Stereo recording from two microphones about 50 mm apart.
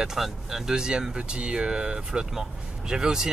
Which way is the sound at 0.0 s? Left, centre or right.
Centre.